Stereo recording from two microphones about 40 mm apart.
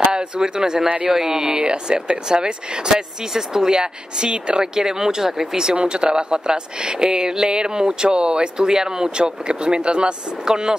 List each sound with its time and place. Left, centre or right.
0.1 s speech: centre
0.8 s a man's voice: right
1.1 s speech: centre
1.6 s speech: right